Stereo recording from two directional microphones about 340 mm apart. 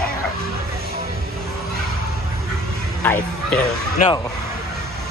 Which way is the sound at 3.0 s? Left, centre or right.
Centre.